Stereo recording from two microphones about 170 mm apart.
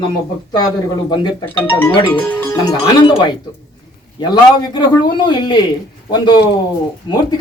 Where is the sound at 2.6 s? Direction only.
25° left (ahead or behind).